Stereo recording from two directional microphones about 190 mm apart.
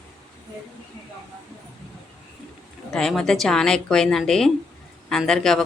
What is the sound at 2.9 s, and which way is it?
Speech, 5° left (ahead or behind).